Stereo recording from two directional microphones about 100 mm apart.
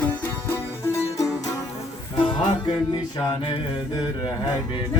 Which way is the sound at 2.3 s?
50° left (ahead or behind).